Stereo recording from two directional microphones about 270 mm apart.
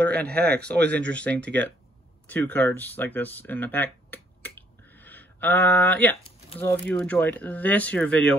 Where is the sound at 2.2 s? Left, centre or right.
Centre.